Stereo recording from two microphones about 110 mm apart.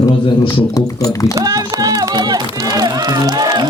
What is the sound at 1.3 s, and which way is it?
Music, 35° right (ahead or behind).